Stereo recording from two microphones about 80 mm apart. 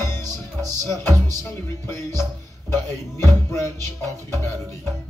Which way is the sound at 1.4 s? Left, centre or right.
Left.